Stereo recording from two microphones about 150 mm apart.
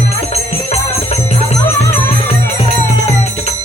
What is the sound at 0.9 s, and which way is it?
Music, 45° left (ahead or behind).